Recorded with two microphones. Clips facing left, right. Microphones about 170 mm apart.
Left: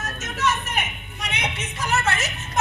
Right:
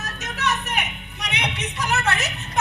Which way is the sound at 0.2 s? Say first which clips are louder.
Left 1 dB; 65° right (ahead or behind).